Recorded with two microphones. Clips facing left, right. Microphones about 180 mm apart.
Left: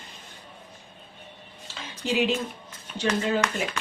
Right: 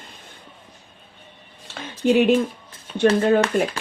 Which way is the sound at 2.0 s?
55° right (ahead or behind).